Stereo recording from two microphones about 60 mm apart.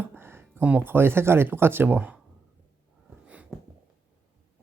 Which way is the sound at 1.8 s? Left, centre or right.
Right.